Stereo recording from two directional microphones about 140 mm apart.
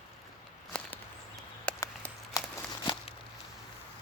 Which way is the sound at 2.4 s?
25° left (ahead or behind).